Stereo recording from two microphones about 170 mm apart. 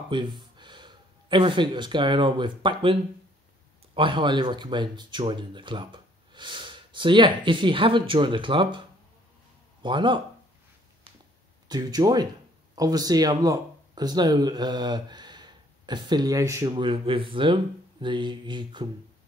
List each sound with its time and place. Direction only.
0.1 s speech: 30° right (ahead or behind)
9.8 s speech: 30° right (ahead or behind)
11.7 s speech: 25° right (ahead or behind)